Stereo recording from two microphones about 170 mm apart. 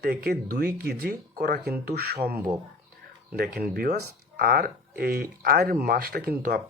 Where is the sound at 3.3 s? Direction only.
65° right (ahead or behind).